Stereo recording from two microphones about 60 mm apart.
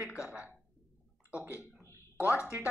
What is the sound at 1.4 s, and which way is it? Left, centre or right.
Speech, left.